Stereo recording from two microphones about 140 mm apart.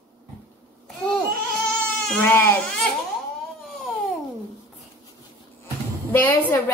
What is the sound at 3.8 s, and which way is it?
Babbling, centre (ahead or behind).